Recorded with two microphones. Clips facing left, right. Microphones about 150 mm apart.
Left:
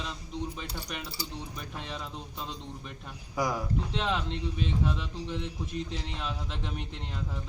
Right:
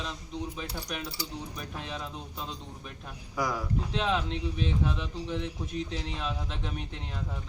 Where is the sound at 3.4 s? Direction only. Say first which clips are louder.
Left 1 dB; 15° left (ahead or behind).